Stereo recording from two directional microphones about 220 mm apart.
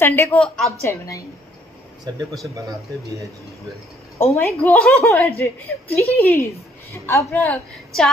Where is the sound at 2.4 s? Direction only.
15° right (ahead or behind).